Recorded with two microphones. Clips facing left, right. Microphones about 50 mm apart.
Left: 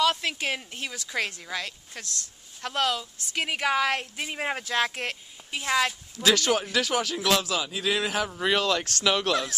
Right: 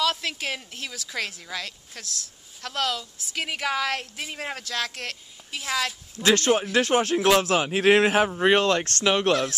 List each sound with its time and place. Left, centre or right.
0.0 s a woman's voice: centre
6.2 s a man's voice: right
7.4 s a man's voice: right
8.4 s speech: right
9.0 s speech: right
9.3 s a woman's voice: centre